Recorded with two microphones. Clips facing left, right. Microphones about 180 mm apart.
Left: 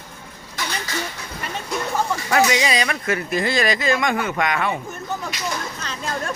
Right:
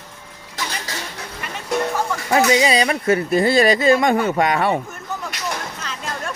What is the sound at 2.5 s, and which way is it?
Speech, 30° right (ahead or behind).